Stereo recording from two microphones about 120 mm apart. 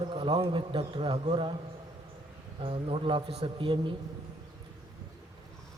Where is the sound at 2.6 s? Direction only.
50° right (ahead or behind).